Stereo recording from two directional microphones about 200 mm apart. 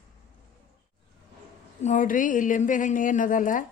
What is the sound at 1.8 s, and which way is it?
A woman's voice, 40° left (ahead or behind).